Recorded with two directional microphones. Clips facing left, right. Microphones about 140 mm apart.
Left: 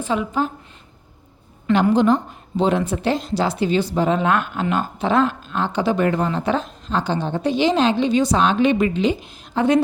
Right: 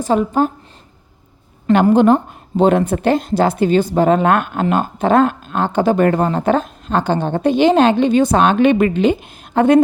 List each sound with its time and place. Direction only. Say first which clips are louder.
0.0 s speech: right 6 dB; 45° right (ahead or behind)
1.9 s speech: right 5 dB; 55° right (ahead or behind)